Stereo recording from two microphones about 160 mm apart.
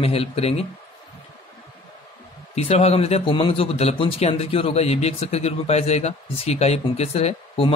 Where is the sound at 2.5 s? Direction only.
40° left (ahead or behind).